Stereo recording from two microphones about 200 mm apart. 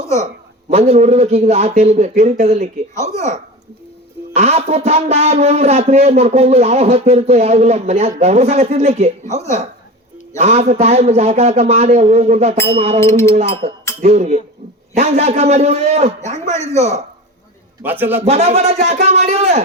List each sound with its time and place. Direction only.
0.7 s speech: 30° right (ahead or behind)
4.4 s speech: 30° right (ahead or behind)
13.0 s speech: 15° left (ahead or behind)
13.3 s speech: 30° right (ahead or behind)
17.8 s a man's voice: 10° right (ahead or behind)
18.2 s speech: 30° right (ahead or behind)